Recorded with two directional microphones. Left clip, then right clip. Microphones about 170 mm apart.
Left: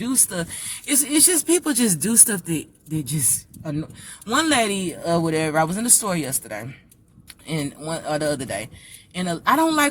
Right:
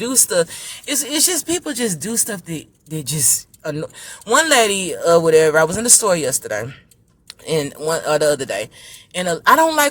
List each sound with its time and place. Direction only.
0.0 s speech: 25° right (ahead or behind); by 2.6 s 5° right (ahead or behind)
3.6 s speech: 35° right (ahead or behind)